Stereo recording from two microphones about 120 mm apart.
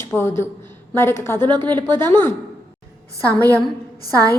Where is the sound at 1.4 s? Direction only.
40° right (ahead or behind).